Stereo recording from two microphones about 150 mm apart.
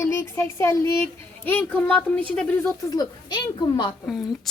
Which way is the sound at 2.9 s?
25° left (ahead or behind).